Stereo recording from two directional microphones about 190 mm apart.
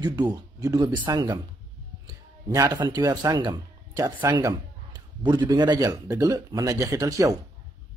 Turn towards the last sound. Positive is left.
turn(degrees=-15)  # may be behind; listen again after turning